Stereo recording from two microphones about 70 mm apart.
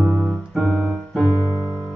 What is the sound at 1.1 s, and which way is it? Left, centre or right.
Music, centre.